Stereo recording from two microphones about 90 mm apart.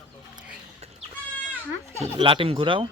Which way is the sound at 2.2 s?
75° right (ahead or behind).